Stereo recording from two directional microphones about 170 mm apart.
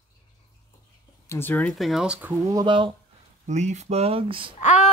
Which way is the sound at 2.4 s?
25° right (ahead or behind).